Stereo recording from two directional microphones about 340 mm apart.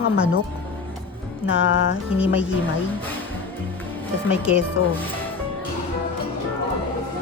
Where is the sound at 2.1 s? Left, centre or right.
Centre.